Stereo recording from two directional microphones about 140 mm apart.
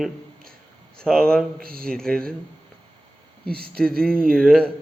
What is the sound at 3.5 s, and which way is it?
Speech, 90° right.